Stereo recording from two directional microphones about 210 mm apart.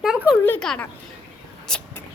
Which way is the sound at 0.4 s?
5° left (ahead or behind).